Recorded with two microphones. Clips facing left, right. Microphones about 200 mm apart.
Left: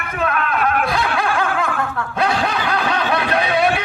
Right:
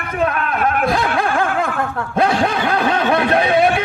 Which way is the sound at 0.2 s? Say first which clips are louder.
Right 1 dB; 40° right (ahead or behind).